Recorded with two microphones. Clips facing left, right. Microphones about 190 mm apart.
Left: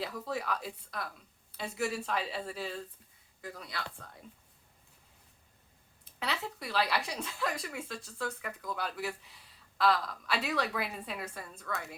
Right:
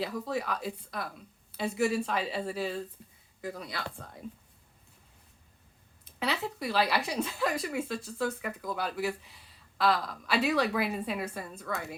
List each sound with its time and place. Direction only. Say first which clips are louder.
0.0 s a woman's voice: right 4 dB; centre (ahead or behind)
6.1 s a woman's voice: right 5 dB; 5° right (ahead or behind)
11.3 s a woman's voice: right 4 dB; 20° right (ahead or behind)